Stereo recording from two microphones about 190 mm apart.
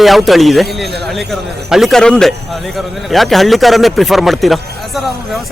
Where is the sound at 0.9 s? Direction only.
60° right (ahead or behind).